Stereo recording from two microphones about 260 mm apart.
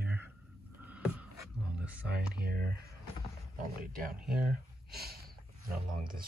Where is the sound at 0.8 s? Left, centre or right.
Centre.